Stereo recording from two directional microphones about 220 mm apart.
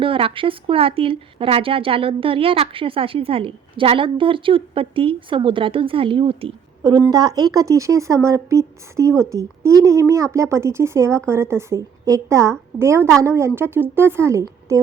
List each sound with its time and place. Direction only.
0.0 s a woman's voice: 25° right (ahead or behind)